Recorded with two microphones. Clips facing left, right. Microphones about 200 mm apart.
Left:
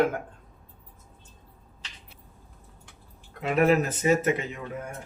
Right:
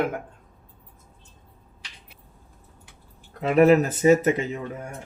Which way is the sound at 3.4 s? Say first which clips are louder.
Right 5 dB; 35° right (ahead or behind).